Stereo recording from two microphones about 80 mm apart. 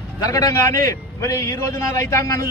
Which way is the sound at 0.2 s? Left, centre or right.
Left.